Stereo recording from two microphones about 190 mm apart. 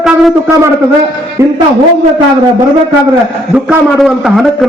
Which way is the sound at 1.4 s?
15° right (ahead or behind).